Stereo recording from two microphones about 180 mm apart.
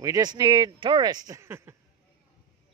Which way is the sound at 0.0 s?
20° right (ahead or behind).